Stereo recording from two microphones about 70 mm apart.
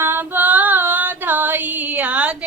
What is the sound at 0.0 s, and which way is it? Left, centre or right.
Female singing, right.